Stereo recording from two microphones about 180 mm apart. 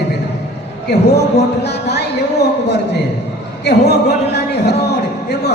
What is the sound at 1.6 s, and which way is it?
Speech, 65° left (ahead or behind).